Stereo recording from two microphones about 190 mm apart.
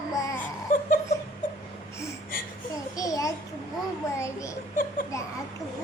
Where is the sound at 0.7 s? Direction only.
45° left (ahead or behind).